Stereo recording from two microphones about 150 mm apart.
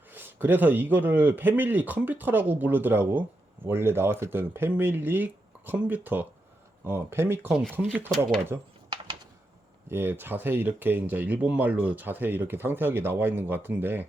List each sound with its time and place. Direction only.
0.1 s speech: 15° right (ahead or behind)
9.9 s speech: 15° right (ahead or behind)